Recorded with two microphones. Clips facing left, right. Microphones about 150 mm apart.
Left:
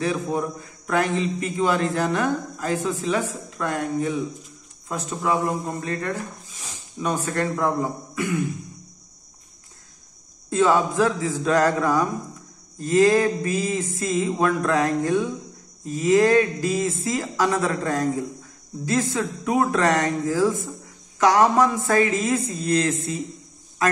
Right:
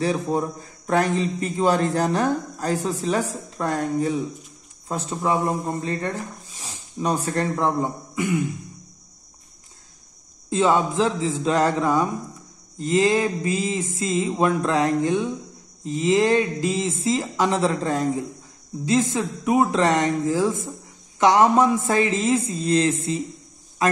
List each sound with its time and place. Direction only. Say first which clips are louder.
0.0 s a man's voice: right 2 dB; 30° right (ahead or behind)
10.5 s a man's voice: even; 20° right (ahead or behind)